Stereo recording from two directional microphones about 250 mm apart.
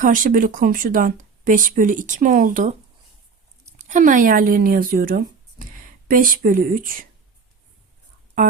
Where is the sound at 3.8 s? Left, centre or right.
Right.